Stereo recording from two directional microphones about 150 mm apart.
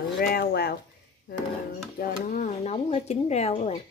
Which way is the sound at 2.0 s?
60° left (ahead or behind).